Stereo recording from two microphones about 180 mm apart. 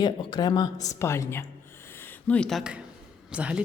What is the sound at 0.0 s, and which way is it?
A woman's voice, 25° left (ahead or behind).